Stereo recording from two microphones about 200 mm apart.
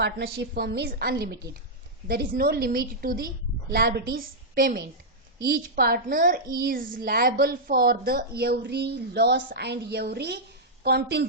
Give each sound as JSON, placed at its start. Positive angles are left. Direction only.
{"t": 0.0, "sound": "a woman's voice", "side_deg": -55}